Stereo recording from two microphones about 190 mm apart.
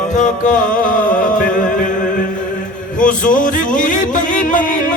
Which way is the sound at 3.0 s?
45° left (ahead or behind).